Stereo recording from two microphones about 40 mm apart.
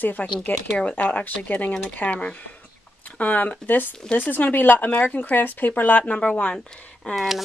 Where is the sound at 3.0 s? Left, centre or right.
Left.